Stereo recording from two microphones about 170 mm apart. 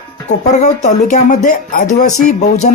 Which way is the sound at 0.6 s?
45° left (ahead or behind).